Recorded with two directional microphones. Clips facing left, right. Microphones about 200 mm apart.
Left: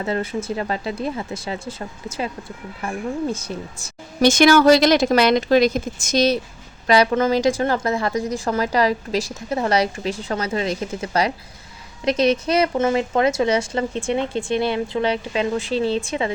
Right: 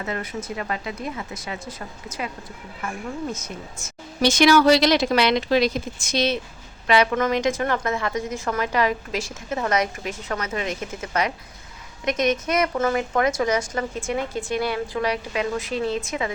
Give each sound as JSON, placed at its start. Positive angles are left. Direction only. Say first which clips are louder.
{"t": 0.0, "sound": "a woman's voice", "louder": "left 6 dB", "side_deg": 30}
{"t": 4.2, "sound": "a woman's voice", "louder": "left 3 dB", "side_deg": 50}